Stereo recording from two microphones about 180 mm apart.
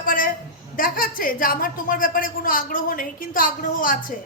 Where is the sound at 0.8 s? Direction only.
50° left (ahead or behind).